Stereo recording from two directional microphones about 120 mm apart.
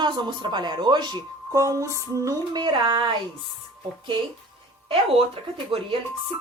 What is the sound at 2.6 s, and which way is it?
Speech, 45° right (ahead or behind).